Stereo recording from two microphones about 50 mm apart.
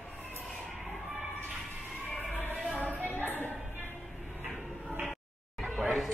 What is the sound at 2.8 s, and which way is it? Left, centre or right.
Music, right.